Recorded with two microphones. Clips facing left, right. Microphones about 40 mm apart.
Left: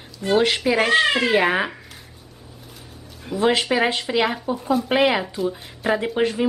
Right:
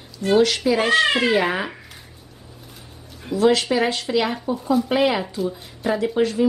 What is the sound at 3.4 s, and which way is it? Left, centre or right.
A woman's voice, left.